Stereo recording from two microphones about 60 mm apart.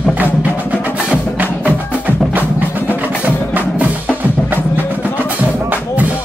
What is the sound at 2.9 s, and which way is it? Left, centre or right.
Wood block, right.